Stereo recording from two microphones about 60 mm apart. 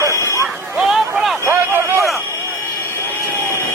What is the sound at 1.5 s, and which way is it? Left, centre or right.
Speech, right.